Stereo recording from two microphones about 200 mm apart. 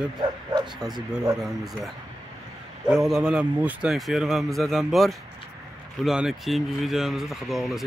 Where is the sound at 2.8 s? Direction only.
Centre (ahead or behind).